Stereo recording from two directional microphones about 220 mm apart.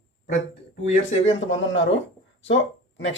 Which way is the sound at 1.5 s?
60° left (ahead or behind).